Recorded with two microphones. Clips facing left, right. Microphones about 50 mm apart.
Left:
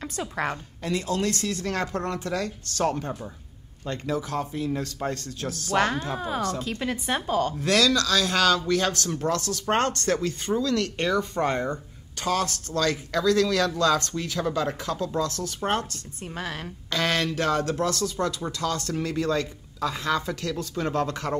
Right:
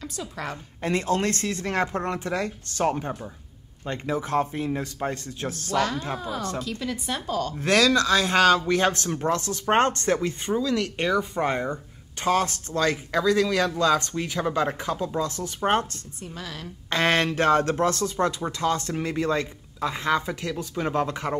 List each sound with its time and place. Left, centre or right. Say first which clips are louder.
0.0 s speech: left 4 dB; left
0.8 s speech: right 2 dB; right
5.7 s speech: left 2 dB; left
7.6 s speech: right 4 dB; right
12.2 s speech: right 3 dB; right
16.3 s speech: left 5 dB; left
16.9 s speech: right 3 dB; right